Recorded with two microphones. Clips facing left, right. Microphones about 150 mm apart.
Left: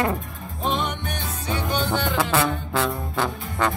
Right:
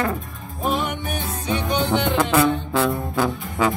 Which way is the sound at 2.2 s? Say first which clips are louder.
Right 4 dB; centre (ahead or behind).